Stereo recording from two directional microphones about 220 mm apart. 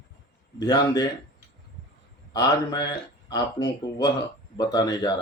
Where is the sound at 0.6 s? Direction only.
20° left (ahead or behind).